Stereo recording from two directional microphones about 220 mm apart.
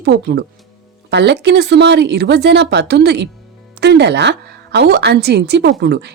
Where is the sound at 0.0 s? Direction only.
50° right (ahead or behind).